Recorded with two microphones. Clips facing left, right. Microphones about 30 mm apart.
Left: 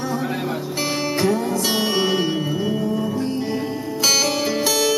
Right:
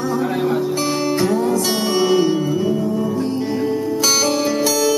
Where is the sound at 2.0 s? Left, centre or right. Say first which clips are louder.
Right 8 dB; centre.